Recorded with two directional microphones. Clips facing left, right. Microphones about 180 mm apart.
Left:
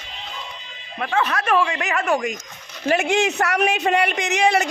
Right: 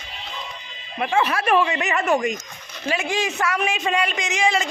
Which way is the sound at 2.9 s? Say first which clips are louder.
Left 5 dB; 70° left (ahead or behind).